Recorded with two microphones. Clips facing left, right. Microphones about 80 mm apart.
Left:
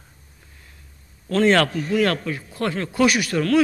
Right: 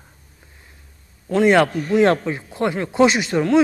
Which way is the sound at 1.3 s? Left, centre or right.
Centre.